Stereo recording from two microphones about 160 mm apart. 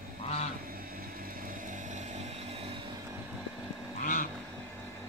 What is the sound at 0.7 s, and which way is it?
Vehicle, 65° right (ahead or behind).